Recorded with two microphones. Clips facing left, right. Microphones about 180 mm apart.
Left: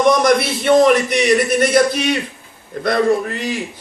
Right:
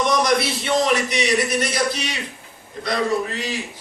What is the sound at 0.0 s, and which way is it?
A man's voice, 55° left (ahead or behind).